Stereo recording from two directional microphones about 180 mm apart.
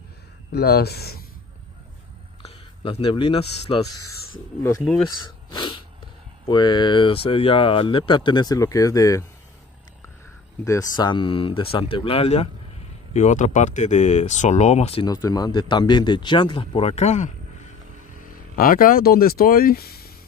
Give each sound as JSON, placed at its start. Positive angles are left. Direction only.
{"t": 0.5, "sound": "speech", "side_deg": 65}
{"t": 2.4, "sound": "speech", "side_deg": 30}
{"t": 5.0, "sound": "a sound", "side_deg": 25}
{"t": 6.4, "sound": "speech", "side_deg": 25}
{"t": 10.6, "sound": "speech", "side_deg": 20}
{"t": 15.0, "sound": "speech", "side_deg": 20}
{"t": 18.6, "sound": "speech", "side_deg": 50}